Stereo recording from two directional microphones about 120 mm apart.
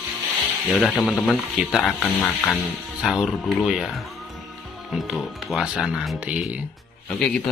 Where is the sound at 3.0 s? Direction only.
Centre (ahead or behind).